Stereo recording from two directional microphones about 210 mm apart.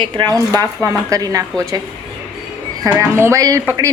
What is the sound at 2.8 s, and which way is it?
Speech, 15° right (ahead or behind).